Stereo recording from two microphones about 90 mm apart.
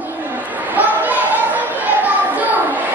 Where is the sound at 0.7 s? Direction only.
20° right (ahead or behind).